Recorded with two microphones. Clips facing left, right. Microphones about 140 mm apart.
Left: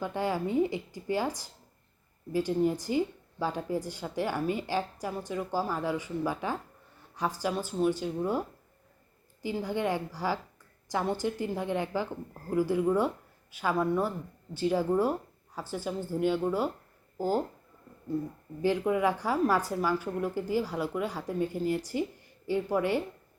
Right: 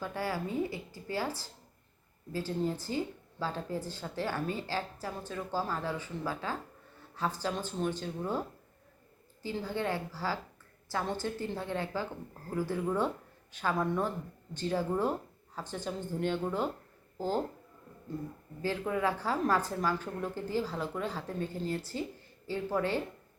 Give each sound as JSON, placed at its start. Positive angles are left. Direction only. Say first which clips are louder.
{"t": 0.0, "sound": "a woman's voice", "louder": "left 4 dB", "side_deg": 20}
{"t": 18.6, "sound": "a woman's voice", "louder": "left 5 dB", "side_deg": 15}